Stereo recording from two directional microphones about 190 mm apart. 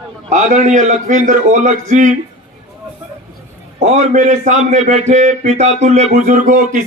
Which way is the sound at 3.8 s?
40° right (ahead or behind).